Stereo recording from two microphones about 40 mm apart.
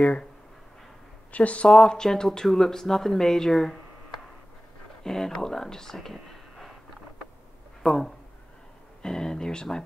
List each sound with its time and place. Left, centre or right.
1.3 s speech: left
1.7 s speech: centre
6.1 s a sound: centre
7.8 s speech: centre